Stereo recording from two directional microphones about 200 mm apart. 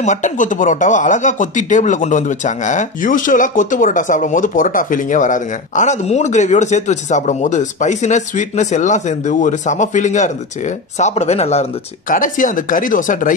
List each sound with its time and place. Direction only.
0.0 s speech: 40° left (ahead or behind)